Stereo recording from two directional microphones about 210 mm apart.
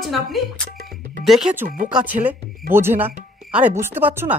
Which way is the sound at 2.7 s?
10° right (ahead or behind).